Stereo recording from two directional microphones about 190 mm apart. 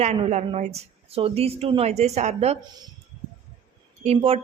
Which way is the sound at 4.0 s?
30° right (ahead or behind).